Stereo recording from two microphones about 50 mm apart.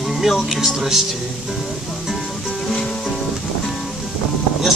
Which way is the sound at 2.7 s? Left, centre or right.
Centre.